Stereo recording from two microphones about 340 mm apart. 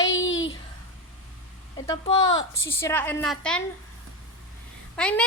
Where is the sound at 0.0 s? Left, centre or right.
Left.